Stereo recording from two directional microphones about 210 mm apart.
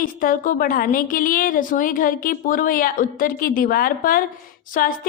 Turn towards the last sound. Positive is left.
turn(degrees=40)  # may be behind; listen again after turning